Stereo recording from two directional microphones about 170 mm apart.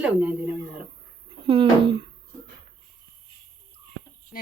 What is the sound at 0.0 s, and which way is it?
Speech, 10° right (ahead or behind).